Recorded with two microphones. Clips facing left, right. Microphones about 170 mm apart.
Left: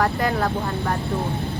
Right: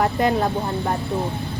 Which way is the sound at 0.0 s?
20° right (ahead or behind).